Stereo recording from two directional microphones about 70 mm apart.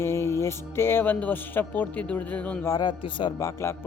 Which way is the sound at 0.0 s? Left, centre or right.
Left.